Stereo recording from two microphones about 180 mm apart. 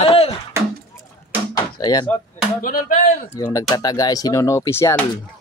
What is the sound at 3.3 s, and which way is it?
Speech, 15° left (ahead or behind).